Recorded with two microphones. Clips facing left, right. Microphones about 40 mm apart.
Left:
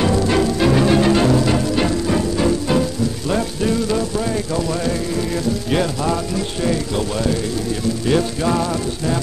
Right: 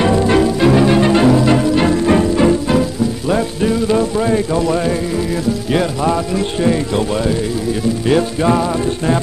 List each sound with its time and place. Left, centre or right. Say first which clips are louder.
0.0 s music: right 4 dB; centre
2.7 s music: right 3 dB; centre
5.7 s music: right 4 dB; centre
6.3 s speech: right 5 dB; right
8.1 s music: right 4 dB; centre